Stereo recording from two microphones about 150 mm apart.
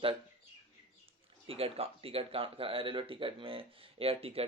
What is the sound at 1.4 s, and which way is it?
Speech, 40° right (ahead or behind).